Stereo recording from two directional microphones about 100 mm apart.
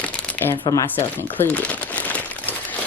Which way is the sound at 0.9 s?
20° left (ahead or behind).